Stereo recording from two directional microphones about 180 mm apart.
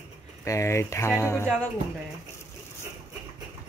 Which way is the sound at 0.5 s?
15° left (ahead or behind).